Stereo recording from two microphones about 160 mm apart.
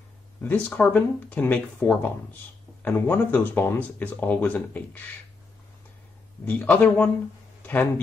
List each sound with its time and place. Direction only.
0.4 s speech: 10° left (ahead or behind)
6.4 s speech: 10° left (ahead or behind)